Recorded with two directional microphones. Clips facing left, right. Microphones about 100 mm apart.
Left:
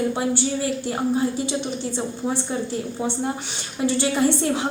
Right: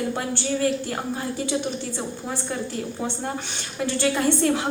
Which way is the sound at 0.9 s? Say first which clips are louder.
Left 6 dB; 20° left (ahead or behind).